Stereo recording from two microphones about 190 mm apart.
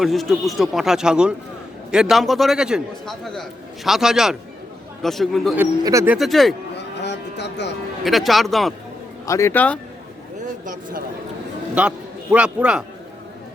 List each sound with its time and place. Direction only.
0.0 s a man's voice: centre (ahead or behind)
5.5 s speech: 15° right (ahead or behind)
6.1 s a man's voice: centre (ahead or behind)
7.0 s music: 65° left (ahead or behind)
8.0 s a man's voice: centre (ahead or behind)
9.2 s speech: 15° left (ahead or behind)
11.7 s a man's voice: 5° right (ahead or behind)